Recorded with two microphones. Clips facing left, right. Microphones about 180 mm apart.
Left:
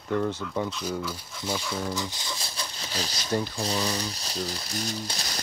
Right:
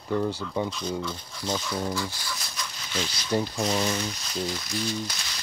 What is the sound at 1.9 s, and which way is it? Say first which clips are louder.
Speech: right 1 dB; 20° left (ahead or behind).